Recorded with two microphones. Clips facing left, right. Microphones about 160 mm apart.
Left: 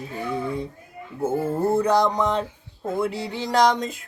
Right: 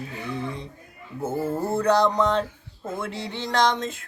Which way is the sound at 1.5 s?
10° left (ahead or behind).